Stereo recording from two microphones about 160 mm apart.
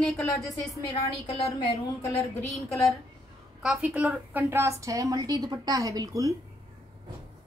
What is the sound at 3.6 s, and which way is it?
A woman's voice, 5° right (ahead or behind).